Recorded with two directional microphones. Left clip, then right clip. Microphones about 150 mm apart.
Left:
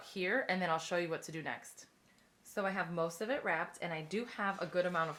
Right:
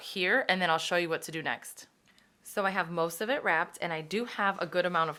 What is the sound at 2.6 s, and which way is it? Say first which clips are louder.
A woman's voice: right 7 dB; 35° right (ahead or behind).